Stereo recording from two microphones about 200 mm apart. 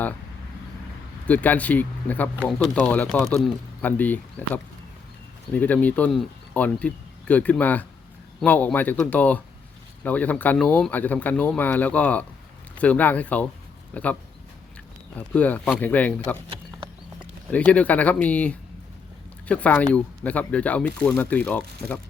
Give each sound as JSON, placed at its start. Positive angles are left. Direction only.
{"t": 1.3, "sound": "speech", "side_deg": 5}
{"t": 17.5, "sound": "speech", "side_deg": 5}